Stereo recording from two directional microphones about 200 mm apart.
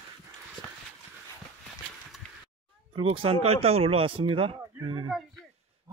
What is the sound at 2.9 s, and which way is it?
Speech, 30° right (ahead or behind).